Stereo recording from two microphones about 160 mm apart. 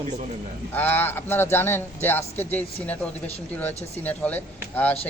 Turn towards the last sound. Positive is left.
turn(degrees=10)  # may be behind; listen again after turning